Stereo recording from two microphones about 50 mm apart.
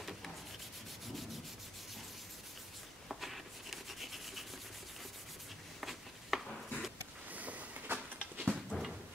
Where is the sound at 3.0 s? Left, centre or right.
Centre.